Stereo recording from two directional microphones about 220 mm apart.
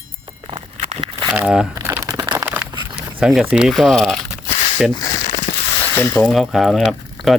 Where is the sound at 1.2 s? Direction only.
5° right (ahead or behind).